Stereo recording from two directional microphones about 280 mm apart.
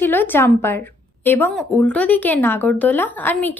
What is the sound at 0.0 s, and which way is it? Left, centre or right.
A woman's voice, centre.